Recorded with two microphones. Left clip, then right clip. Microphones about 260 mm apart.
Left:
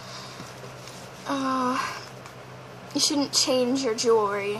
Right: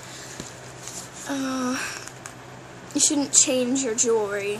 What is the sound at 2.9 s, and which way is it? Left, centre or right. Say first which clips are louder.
Speech: right 2 dB; centre.